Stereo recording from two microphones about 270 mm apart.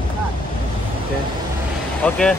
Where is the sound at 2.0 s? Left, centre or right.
Centre.